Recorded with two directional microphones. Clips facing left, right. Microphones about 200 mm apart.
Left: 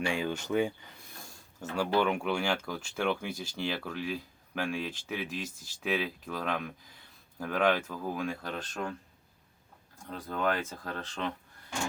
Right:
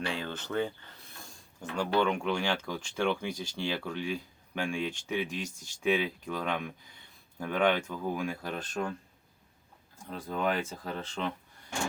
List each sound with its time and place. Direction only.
0.0 s speech: 10° left (ahead or behind)
2.0 s speech: 5° left (ahead or behind)
10.1 s speech: 10° right (ahead or behind)